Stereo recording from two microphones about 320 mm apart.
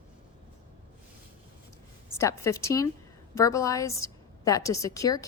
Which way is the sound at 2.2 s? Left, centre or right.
Centre.